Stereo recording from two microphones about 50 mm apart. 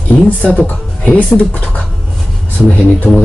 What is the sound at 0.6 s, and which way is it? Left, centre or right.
Speech, left.